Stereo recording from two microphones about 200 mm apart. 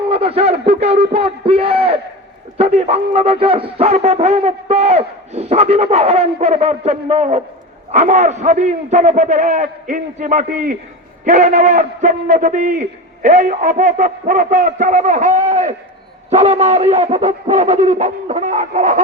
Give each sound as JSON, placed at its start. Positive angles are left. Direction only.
{"t": 0.1, "sound": "a man's voice", "side_deg": -30}